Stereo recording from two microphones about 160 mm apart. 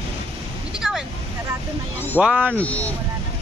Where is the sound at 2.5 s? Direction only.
10° left (ahead or behind).